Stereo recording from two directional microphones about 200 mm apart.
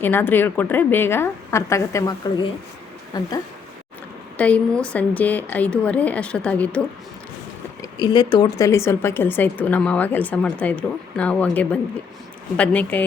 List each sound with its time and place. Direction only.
0.0 s speech: 10° left (ahead or behind)
4.4 s speech: 5° left (ahead or behind)
7.8 s speech: 20° left (ahead or behind)